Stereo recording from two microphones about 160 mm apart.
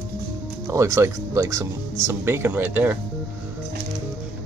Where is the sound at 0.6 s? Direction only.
20° right (ahead or behind).